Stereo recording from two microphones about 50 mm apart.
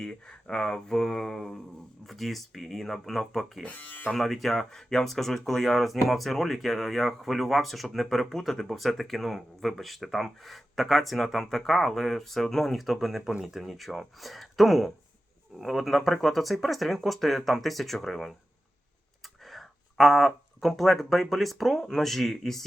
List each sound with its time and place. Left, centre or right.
0.0 s speech: centre
3.7 s speech: left
4.1 s speech: centre
19.5 s speech: centre